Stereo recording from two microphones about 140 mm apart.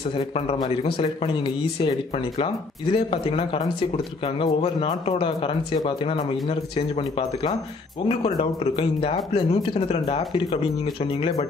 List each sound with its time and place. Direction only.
0.6 s speech: 40° left (ahead or behind)